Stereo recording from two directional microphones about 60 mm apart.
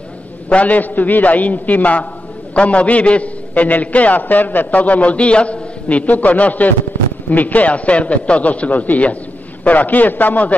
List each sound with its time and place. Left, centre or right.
0.5 s a man's voice: left